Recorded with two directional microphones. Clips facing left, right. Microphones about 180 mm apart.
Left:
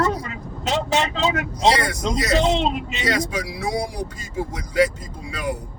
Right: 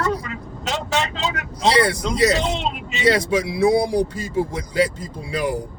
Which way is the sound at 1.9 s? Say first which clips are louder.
Right 3 dB; 30° right (ahead or behind).